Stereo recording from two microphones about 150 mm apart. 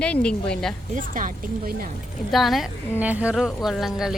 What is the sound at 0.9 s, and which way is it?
Speech, 65° right (ahead or behind).